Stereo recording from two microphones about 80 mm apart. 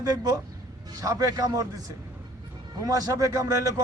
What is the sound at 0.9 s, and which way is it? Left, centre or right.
A man's voice, right.